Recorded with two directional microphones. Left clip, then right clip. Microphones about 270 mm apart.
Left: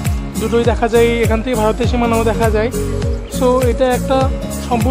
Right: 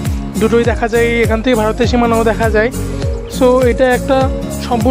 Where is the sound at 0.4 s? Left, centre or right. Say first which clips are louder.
Right 2 dB; centre.